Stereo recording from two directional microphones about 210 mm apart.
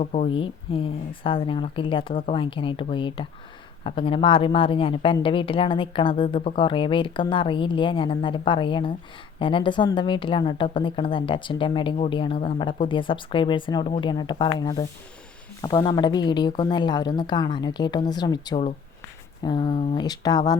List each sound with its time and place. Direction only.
0.0 s a woman's voice: 35° left (ahead or behind)